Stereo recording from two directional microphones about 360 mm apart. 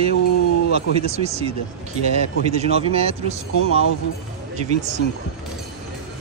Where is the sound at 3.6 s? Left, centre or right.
Left.